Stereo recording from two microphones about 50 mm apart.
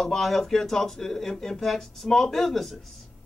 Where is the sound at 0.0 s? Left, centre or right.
Centre.